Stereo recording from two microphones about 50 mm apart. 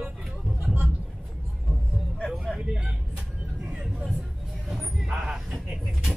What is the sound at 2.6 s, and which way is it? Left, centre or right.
Vehicle, centre.